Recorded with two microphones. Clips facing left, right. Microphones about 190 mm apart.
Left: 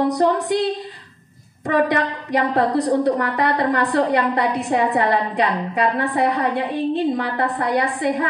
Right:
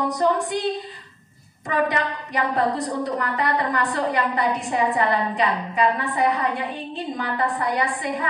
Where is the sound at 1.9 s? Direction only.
70° left (ahead or behind).